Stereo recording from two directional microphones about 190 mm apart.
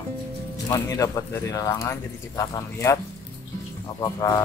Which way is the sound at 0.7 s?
15° left (ahead or behind).